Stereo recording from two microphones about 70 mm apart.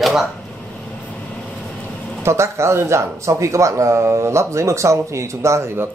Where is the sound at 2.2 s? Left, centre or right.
Right.